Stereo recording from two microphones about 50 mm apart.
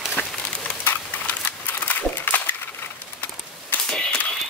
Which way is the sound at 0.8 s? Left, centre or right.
Left.